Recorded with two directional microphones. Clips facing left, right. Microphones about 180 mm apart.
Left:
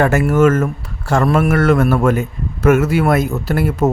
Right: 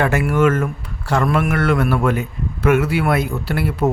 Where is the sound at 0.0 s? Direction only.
45° left (ahead or behind).